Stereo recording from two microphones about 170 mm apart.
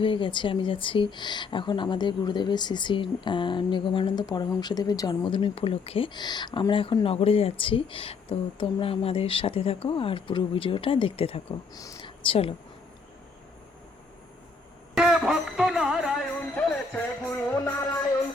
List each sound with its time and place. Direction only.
0.0 s speech: 30° left (ahead or behind)
11.7 s speech: 20° left (ahead or behind)
14.9 s music: centre (ahead or behind)